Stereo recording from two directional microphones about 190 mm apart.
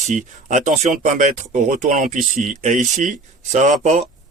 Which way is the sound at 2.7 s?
Centre (ahead or behind).